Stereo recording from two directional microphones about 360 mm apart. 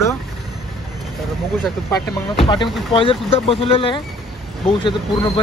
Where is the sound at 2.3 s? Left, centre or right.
Centre.